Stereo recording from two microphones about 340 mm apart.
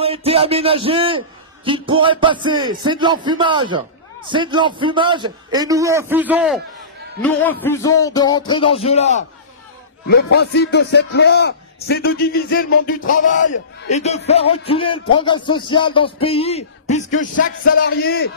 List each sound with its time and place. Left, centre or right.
0.0 s a man's voice: centre
10.0 s a man's voice: left